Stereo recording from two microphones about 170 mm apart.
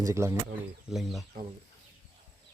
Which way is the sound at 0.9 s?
Centre (ahead or behind).